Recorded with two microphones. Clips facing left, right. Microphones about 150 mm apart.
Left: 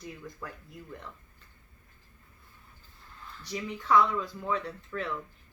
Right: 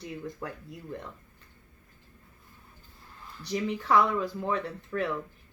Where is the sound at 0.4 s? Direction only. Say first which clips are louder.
Right 2 dB; 15° right (ahead or behind).